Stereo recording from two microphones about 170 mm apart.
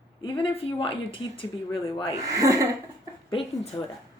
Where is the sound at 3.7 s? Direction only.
25° left (ahead or behind).